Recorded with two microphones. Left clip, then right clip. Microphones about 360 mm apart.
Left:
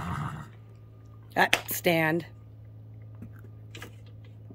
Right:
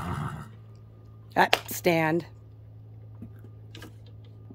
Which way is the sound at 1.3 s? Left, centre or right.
Centre.